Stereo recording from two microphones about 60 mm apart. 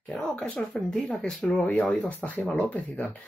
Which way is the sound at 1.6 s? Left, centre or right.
Centre.